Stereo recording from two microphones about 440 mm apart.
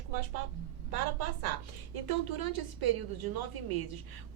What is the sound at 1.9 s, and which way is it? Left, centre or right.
A woman's voice, right.